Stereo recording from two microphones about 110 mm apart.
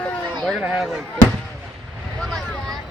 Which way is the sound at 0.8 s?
Centre (ahead or behind).